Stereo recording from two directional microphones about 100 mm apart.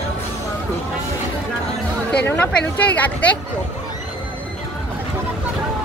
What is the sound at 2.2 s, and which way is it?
Speech, 20° left (ahead or behind).